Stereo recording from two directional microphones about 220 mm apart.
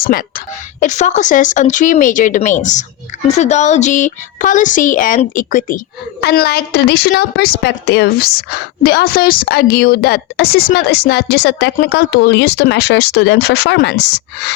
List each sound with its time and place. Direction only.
0.0 s speech: 40° left (ahead or behind)